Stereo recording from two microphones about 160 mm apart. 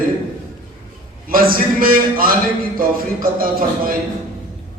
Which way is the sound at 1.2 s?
65° right (ahead or behind).